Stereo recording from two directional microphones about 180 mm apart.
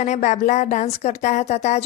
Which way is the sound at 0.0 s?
40° left (ahead or behind).